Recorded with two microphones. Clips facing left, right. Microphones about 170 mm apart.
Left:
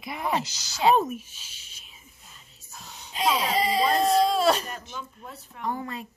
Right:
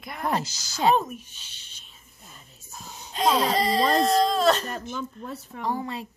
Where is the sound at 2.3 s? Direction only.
45° right (ahead or behind).